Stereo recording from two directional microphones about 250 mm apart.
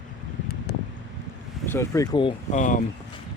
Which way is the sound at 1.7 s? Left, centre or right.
Centre.